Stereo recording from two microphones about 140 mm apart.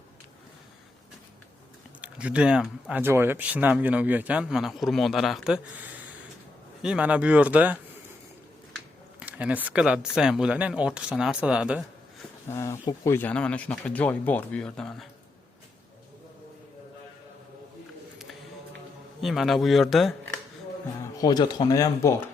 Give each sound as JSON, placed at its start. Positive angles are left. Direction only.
{"t": 2.0, "sound": "speech", "side_deg": -10}
{"t": 3.0, "sound": "speech", "side_deg": -15}
{"t": 6.8, "sound": "speech", "side_deg": -5}
{"t": 9.2, "sound": "speech", "side_deg": -10}
{"t": 12.5, "sound": "speech", "side_deg": 20}
{"t": 13.1, "sound": "speech", "side_deg": 10}
{"t": 19.2, "sound": "a man's voice", "side_deg": 0}
{"t": 21.2, "sound": "speech", "side_deg": 30}